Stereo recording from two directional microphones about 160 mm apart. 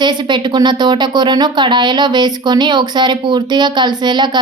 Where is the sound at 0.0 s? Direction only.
30° right (ahead or behind).